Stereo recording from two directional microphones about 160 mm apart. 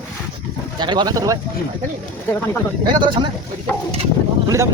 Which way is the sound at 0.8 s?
30° right (ahead or behind).